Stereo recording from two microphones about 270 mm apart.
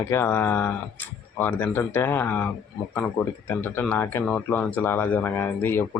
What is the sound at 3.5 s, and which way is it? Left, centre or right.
Speech, centre.